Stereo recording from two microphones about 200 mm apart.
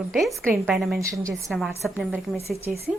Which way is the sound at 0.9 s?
15° right (ahead or behind).